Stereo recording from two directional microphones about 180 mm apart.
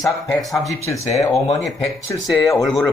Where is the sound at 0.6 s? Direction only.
15° left (ahead or behind).